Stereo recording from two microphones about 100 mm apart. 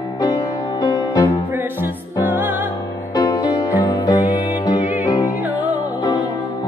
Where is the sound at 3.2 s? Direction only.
45° left (ahead or behind).